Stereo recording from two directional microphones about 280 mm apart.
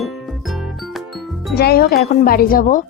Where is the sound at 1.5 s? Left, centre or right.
Left.